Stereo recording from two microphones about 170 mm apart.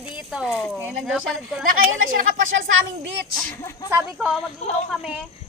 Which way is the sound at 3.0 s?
85° right.